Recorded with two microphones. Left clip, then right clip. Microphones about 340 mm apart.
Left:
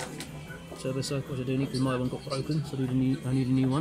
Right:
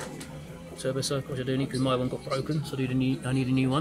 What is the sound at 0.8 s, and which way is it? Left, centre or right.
Speech, right.